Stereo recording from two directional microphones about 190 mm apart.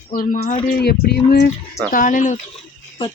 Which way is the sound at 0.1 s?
45° left (ahead or behind).